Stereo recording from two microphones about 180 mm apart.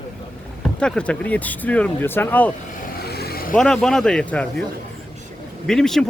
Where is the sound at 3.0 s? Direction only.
60° left (ahead or behind).